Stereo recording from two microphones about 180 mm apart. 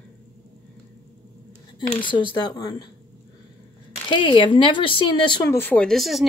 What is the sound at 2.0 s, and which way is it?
Speech, 25° left (ahead or behind).